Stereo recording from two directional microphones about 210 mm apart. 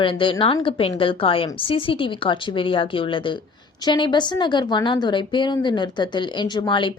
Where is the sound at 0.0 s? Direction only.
25° left (ahead or behind).